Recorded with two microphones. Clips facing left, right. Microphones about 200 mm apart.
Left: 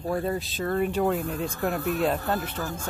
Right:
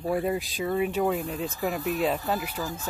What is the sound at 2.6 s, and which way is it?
Speech, 55° left (ahead or behind).